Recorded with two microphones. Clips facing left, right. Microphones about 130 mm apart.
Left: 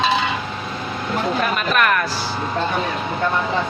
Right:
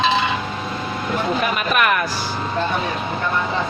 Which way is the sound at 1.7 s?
10° right (ahead or behind).